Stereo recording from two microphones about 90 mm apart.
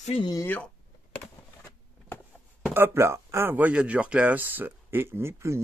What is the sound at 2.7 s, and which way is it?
Speech, 25° right (ahead or behind).